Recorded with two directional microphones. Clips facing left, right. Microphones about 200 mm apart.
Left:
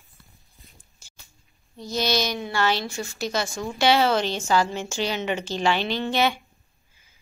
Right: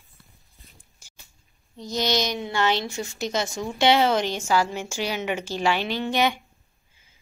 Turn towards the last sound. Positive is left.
turn(degrees=-15)  # may be behind; listen again after turning